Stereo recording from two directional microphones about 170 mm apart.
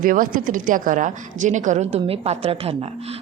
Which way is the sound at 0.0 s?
55° right (ahead or behind).